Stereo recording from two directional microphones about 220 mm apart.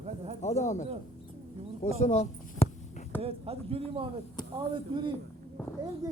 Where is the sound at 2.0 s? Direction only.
30° left (ahead or behind).